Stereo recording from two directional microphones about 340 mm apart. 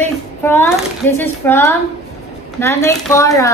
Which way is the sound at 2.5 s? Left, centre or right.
Centre.